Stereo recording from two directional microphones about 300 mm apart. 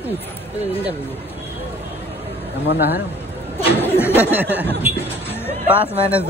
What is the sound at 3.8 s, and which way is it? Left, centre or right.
Speech, centre.